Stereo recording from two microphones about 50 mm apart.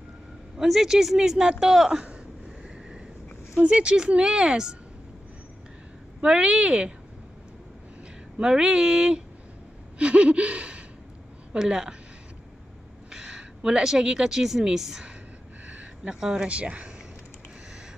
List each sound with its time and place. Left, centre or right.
0.6 s a man's voice: centre
3.5 s a man's voice: right
6.2 s speech: centre
8.4 s a man's voice: centre
9.9 s a sound: right
11.5 s a man's voice: centre
13.1 s a woman's voice: centre
15.6 s a sound: right
16.1 s speech: centre